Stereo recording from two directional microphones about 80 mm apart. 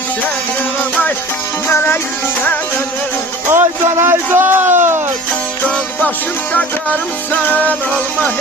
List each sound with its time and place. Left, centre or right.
1.6 s music: left
3.5 s speech: right
7.5 s music: left